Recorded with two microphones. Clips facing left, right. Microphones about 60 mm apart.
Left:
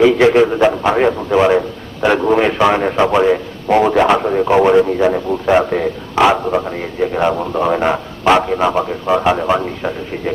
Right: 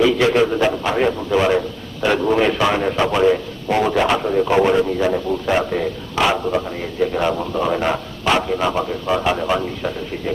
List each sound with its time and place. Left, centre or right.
0.0 s a man's voice: left